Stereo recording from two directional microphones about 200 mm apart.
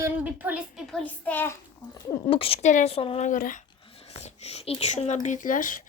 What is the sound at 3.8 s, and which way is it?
Speech, 30° left (ahead or behind).